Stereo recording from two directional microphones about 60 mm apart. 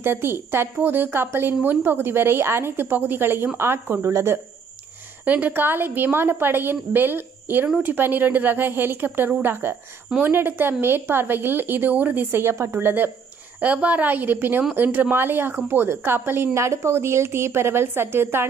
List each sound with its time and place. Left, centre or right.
0.0 s a woman's voice: right
5.2 s a woman's voice: right
12.5 s a woman's voice: right
12.8 s a woman's voice: right